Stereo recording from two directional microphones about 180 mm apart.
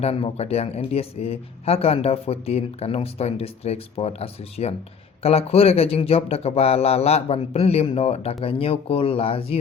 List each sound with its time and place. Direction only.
0.0 s speech: 35° left (ahead or behind)